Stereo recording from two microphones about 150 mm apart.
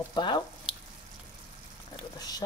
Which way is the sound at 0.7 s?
5° right (ahead or behind).